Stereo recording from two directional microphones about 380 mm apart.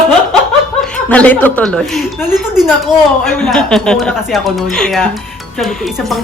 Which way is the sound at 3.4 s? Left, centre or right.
Centre.